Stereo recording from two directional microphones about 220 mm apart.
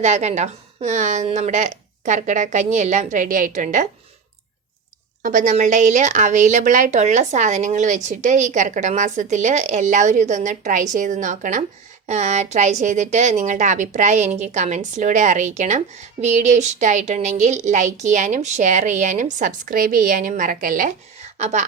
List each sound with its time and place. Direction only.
0.0 s a woman's voice: 30° right (ahead or behind)
5.2 s a woman's voice: 35° right (ahead or behind)